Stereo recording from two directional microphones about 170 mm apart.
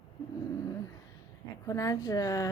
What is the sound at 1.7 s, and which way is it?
Speech, 20° left (ahead or behind).